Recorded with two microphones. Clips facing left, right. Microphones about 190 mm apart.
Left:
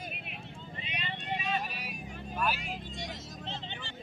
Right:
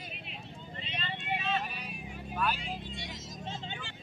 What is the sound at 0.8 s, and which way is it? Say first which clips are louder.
Vehicle: even; 10° left (ahead or behind).